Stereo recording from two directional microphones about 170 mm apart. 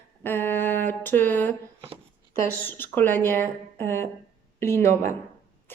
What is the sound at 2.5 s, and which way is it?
A woman's voice, 10° left (ahead or behind).